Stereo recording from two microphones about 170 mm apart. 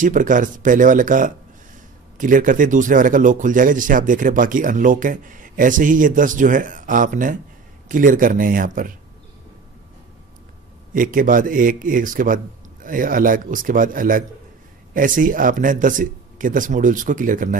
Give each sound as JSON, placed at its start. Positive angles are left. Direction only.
{"t": 0.0, "sound": "a man's voice", "side_deg": -50}
{"t": 10.9, "sound": "a man's voice", "side_deg": -55}